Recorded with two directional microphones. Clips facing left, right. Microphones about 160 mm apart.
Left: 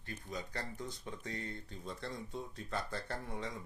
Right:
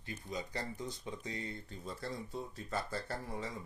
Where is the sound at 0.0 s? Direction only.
10° right (ahead or behind).